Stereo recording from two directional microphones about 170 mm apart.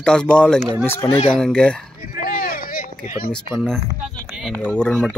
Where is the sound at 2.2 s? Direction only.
60° left (ahead or behind).